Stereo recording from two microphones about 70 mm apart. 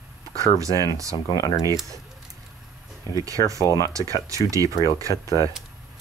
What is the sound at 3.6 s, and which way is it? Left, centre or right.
Speech, left.